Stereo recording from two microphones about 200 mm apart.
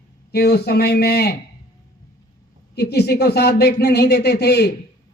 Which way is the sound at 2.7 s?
55° left (ahead or behind).